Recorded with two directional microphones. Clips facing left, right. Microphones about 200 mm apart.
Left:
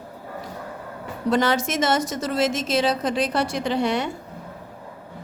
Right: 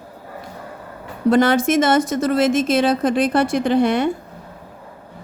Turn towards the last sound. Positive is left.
turn(degrees=-55)  # may be behind; listen again after turning